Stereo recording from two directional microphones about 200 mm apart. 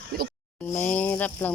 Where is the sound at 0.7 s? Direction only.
10° left (ahead or behind).